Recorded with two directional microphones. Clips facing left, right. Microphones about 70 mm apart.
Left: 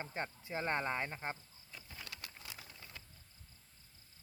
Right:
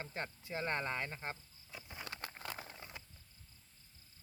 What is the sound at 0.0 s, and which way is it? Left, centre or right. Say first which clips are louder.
Speech: left 2 dB; left.